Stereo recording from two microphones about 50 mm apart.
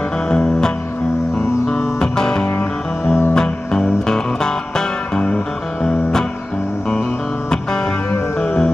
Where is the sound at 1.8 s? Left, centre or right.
Centre.